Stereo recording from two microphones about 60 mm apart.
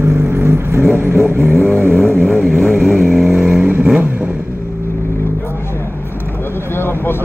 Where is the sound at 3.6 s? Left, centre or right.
Centre.